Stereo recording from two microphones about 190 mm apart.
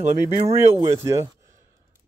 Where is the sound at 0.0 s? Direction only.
35° right (ahead or behind).